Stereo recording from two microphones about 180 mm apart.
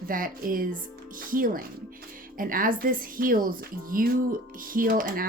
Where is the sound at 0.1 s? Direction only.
50° right (ahead or behind).